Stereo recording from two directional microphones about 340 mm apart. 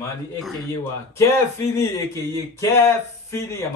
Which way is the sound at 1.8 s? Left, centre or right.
Centre.